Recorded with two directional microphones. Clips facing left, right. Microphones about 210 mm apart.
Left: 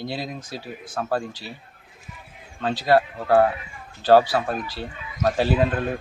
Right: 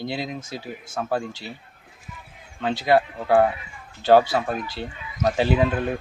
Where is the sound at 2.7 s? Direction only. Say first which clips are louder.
Even; 20° right (ahead or behind).